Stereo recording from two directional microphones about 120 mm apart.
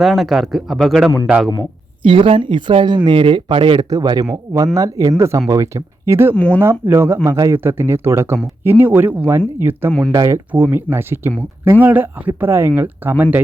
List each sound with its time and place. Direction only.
0.0 s speech: centre (ahead or behind)
2.0 s speech: 50° right (ahead or behind)
3.8 s speech: 30° right (ahead or behind)
6.3 s speech: 10° left (ahead or behind)
6.6 s speech: 20° right (ahead or behind)